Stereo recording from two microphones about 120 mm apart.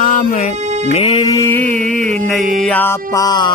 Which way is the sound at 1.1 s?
35° left (ahead or behind).